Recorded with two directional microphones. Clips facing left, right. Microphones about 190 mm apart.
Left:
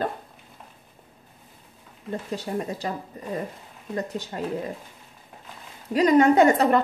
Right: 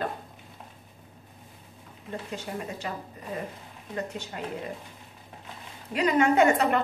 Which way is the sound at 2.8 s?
35° left (ahead or behind).